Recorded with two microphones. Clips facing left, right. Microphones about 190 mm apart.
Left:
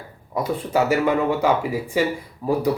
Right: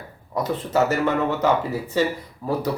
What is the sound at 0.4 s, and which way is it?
Speech, 10° left (ahead or behind).